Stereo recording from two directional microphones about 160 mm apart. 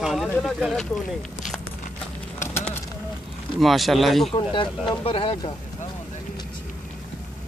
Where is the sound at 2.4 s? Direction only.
15° left (ahead or behind).